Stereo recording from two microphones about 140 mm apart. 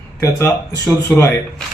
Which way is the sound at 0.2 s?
20° left (ahead or behind).